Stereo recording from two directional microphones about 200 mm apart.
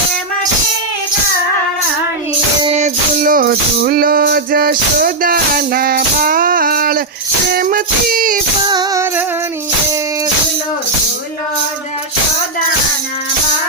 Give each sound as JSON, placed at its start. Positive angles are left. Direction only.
{"t": 2.6, "sound": "music", "side_deg": -35}
{"t": 8.6, "sound": "music", "side_deg": -20}